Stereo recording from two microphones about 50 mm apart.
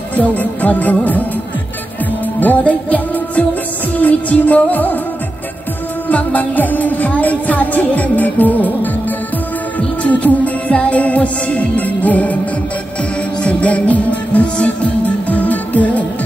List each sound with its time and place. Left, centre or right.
0.1 s music: left
2.4 s music: left
6.0 s music: left
9.8 s music: left
13.4 s music: left